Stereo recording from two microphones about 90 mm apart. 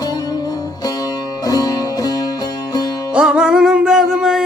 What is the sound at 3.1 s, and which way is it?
Music, 10° right (ahead or behind).